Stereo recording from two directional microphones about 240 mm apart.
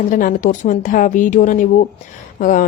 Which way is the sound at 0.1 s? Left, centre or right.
Left.